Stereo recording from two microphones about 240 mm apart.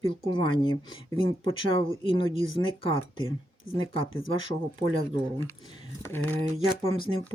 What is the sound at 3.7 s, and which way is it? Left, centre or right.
Speech, left.